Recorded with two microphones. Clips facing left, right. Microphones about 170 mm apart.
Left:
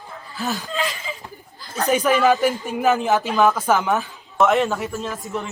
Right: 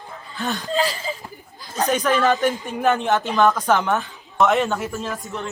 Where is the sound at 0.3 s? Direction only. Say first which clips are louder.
Even; 5° left (ahead or behind).